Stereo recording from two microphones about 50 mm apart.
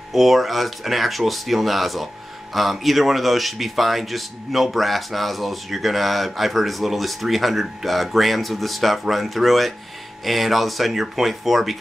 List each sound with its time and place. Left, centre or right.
0.1 s speech: centre